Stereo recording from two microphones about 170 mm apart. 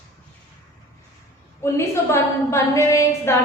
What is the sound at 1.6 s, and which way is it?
A woman's voice, 15° left (ahead or behind).